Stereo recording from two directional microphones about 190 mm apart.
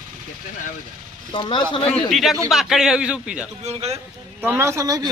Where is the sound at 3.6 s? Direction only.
35° right (ahead or behind).